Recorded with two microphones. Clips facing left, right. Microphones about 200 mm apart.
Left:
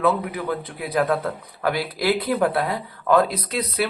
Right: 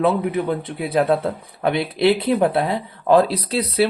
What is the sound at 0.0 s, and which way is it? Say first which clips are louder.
A man's voice: right 3 dB; 25° right (ahead or behind).